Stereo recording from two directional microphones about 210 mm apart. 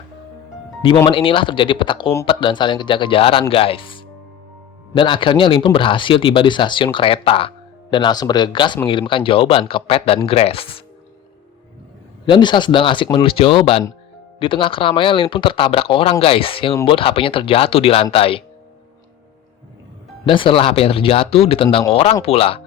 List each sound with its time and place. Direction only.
1.0 s speech: 25° left (ahead or behind)
12.2 s speech: 20° left (ahead or behind)
20.2 s speech: 25° left (ahead or behind)